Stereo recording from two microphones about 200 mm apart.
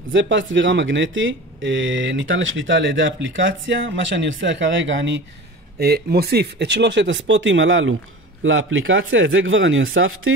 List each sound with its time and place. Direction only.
0.1 s speech: 65° right (ahead or behind)
5.8 s speech: 50° right (ahead or behind); by 10.3 s 85° right